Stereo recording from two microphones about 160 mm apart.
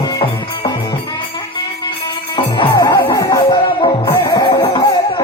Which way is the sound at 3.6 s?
35° left (ahead or behind).